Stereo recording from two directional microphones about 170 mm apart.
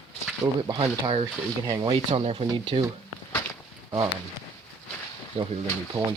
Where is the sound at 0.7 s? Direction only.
30° right (ahead or behind).